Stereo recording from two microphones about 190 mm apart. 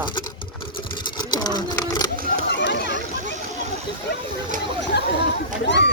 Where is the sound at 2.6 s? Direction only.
65° left (ahead or behind).